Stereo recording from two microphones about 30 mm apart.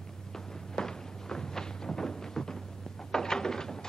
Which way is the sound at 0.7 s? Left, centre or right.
Left.